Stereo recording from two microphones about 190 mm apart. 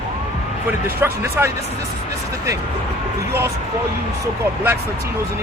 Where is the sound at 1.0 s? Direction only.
15° right (ahead or behind).